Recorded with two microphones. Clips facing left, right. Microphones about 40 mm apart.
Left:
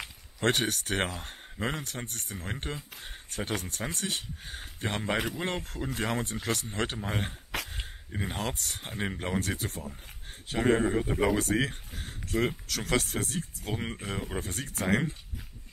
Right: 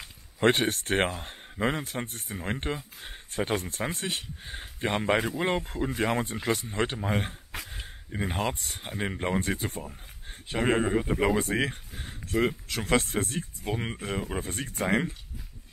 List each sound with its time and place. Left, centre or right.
0.6 s speech: centre